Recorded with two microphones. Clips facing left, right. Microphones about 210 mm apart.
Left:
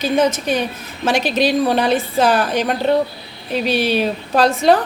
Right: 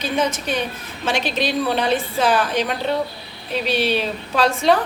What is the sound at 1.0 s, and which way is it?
A woman's voice, 45° left (ahead or behind).